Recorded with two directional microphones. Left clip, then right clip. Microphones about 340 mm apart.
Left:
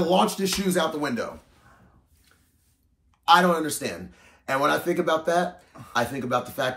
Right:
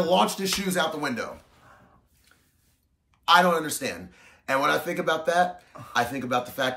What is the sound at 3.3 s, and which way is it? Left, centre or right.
A man's voice, centre.